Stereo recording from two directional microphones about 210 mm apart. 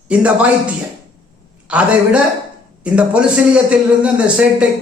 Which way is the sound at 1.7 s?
5° right (ahead or behind).